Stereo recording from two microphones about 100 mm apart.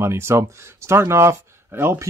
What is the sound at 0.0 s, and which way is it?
Speech, 25° right (ahead or behind).